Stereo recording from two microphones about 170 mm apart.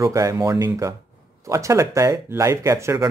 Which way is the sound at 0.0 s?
20° right (ahead or behind).